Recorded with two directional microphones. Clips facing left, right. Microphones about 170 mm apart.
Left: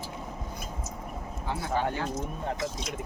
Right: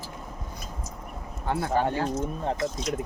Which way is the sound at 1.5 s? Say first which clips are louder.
Right 5 dB; 55° right (ahead or behind).